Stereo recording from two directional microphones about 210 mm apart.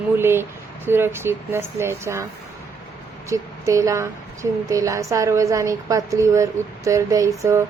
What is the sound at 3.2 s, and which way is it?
A woman's voice, 15° right (ahead or behind).